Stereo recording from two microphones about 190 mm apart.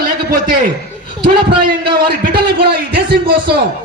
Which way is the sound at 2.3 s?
25° right (ahead or behind).